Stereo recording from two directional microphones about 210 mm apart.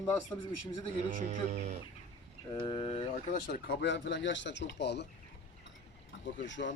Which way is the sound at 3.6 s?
55° left (ahead or behind).